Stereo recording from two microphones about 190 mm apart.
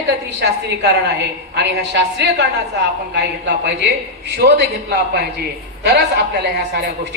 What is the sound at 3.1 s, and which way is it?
A man's voice, 65° right (ahead or behind).